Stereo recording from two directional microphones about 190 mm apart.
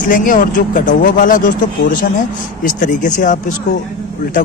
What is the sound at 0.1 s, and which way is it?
Speech, 45° left (ahead or behind).